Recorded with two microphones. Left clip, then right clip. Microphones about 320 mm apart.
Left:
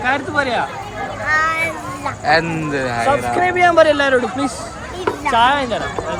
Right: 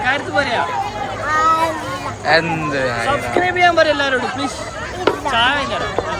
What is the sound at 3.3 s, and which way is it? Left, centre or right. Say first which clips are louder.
A man's voice: even; centre.